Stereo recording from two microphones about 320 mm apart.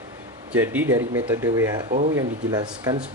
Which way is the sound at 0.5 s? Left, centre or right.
Centre.